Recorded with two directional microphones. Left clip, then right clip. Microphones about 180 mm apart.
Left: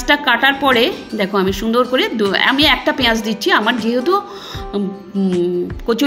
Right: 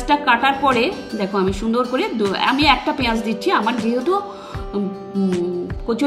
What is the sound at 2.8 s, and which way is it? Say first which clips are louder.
Speech: left 5 dB; 30° left (ahead or behind).